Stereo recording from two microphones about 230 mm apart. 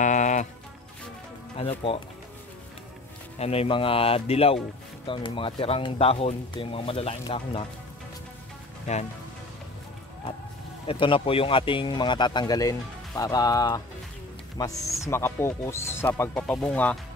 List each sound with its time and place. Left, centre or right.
0.0 s music: left
1.6 s speech: left
3.3 s speech: left
8.9 s speech: left
10.9 s speech: left; by 17.0 s centre